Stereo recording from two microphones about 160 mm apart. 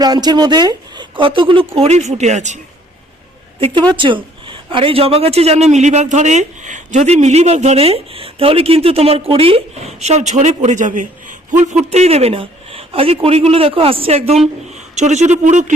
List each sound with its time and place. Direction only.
0.0 s a man's voice: 25° right (ahead or behind); by 2.6 s 45° right (ahead or behind)
3.9 s a man's voice: 30° right (ahead or behind); by 15.7 s 50° right (ahead or behind)